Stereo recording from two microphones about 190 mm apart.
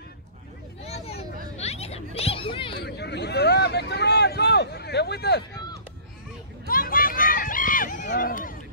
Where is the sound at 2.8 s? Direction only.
60° left (ahead or behind).